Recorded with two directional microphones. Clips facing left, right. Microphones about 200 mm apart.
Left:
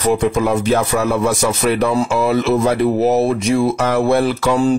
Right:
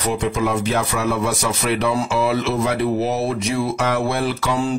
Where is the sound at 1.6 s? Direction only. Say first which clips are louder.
Left 3 dB; 45° left (ahead or behind).